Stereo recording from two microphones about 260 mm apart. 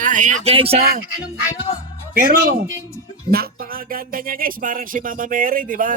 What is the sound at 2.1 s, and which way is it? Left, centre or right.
Speech, right.